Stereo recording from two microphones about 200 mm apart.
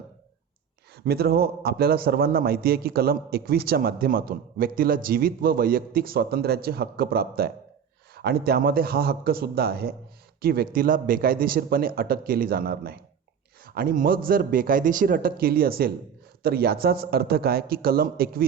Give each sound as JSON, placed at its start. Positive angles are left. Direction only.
{"t": 0.9, "sound": "a man's voice", "side_deg": -50}